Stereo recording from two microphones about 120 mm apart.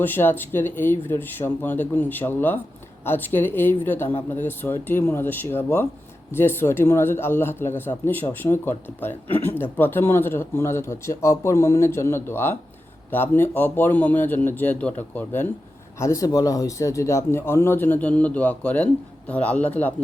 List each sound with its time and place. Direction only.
0.0 s a man's voice: 15° left (ahead or behind)
16.0 s a man's voice: 25° left (ahead or behind)